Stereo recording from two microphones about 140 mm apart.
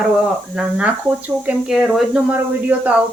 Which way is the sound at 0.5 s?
5° right (ahead or behind).